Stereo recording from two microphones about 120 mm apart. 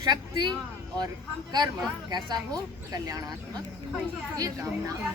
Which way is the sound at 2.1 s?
35° right (ahead or behind).